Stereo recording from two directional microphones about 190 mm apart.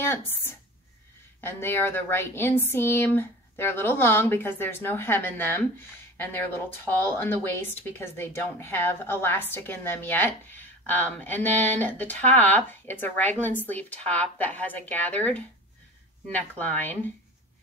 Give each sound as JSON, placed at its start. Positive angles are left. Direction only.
{"t": 0.0, "sound": "a woman's voice", "side_deg": 10}